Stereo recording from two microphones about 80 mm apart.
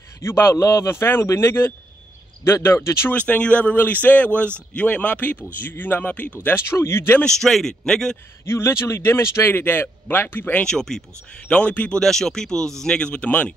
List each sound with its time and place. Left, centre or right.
0.2 s speech: left
3.1 s a man's voice: centre
6.4 s speech: left
7.2 s speech: centre
8.5 s a man's voice: left
10.6 s speech: centre
12.0 s speech: centre